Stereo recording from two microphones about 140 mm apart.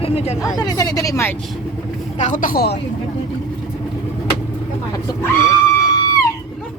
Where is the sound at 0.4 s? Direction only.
25° left (ahead or behind).